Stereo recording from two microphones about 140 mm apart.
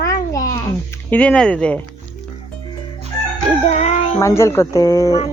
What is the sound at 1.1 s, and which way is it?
Speech, 10° left (ahead or behind).